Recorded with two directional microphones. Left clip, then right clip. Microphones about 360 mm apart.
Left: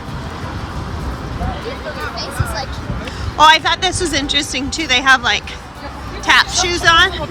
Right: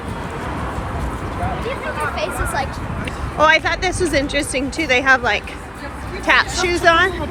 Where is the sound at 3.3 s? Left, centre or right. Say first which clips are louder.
Left 4 dB; centre.